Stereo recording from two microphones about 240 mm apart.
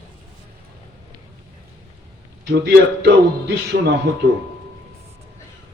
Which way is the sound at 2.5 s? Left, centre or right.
Right.